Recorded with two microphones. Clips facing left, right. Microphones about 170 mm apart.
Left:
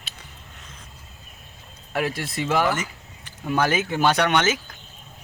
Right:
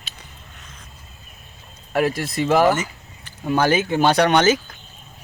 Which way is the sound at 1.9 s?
40° right (ahead or behind).